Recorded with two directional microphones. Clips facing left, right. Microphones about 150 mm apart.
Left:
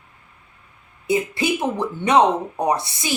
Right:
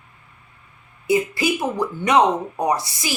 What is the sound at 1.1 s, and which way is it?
Speech, 25° left (ahead or behind).